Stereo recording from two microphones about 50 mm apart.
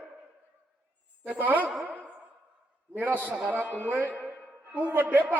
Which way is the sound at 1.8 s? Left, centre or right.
Right.